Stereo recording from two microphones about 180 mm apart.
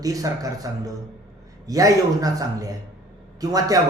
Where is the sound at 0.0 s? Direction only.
20° right (ahead or behind).